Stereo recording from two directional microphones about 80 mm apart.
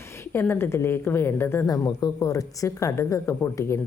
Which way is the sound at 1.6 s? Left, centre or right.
Left.